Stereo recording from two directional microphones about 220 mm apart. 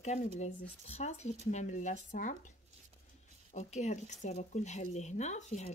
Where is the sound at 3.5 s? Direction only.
30° left (ahead or behind).